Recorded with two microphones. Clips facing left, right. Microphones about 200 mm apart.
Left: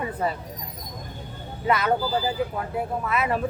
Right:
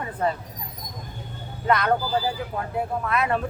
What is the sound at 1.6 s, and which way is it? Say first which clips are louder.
Speech: right 1 dB; 5° left (ahead or behind).